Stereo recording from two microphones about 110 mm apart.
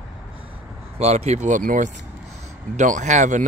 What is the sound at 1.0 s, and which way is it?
Speech, 80° right.